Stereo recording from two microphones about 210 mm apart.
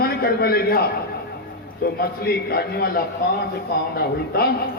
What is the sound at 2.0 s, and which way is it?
A man's voice, 50° left (ahead or behind).